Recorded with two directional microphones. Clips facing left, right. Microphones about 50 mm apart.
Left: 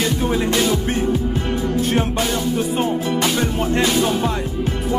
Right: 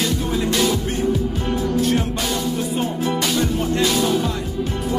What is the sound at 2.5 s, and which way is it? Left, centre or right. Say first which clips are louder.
Music: left 3 dB; left.